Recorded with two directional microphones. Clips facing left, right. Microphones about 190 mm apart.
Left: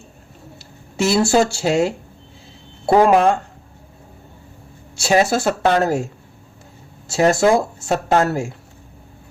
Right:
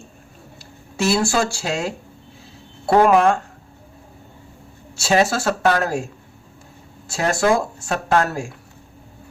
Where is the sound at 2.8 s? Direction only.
15° left (ahead or behind).